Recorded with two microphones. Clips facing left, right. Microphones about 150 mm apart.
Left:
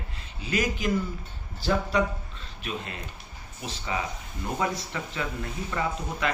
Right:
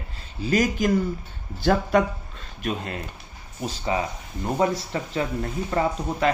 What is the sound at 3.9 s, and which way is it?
Speech, 30° right (ahead or behind).